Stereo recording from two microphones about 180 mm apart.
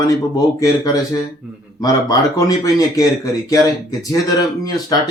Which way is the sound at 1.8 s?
20° left (ahead or behind).